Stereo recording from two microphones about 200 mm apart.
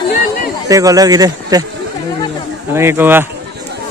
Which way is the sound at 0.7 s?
15° right (ahead or behind).